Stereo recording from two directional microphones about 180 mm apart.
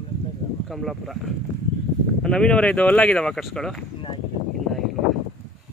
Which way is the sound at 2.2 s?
5° left (ahead or behind).